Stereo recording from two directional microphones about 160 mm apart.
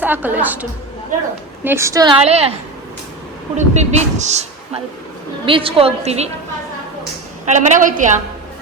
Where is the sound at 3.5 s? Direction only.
45° right (ahead or behind).